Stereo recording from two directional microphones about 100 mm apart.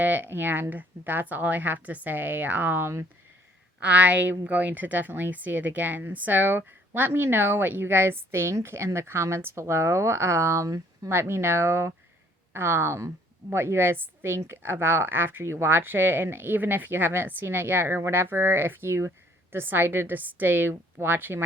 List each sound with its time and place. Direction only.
0.0 s speech: 20° right (ahead or behind)
3.8 s speech: 15° right (ahead or behind)